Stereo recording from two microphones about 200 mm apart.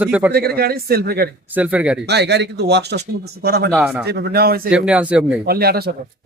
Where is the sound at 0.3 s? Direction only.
50° right (ahead or behind).